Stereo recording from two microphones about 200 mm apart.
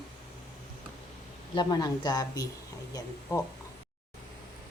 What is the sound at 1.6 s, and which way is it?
Speech, 20° left (ahead or behind).